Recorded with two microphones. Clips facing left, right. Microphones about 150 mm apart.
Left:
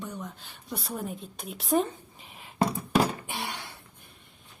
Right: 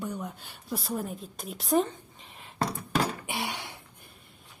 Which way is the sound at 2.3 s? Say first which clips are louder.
Left 4 dB; centre (ahead or behind).